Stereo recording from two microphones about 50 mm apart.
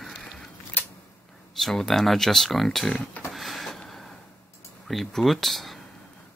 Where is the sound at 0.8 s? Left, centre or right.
Left.